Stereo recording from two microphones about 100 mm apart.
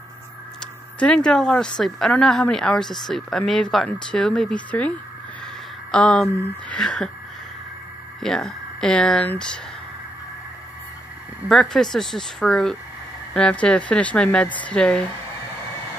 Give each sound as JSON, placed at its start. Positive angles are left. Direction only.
{"t": 0.9, "sound": "speech", "side_deg": 10}
{"t": 8.2, "sound": "speech", "side_deg": 5}
{"t": 11.7, "sound": "speech", "side_deg": 5}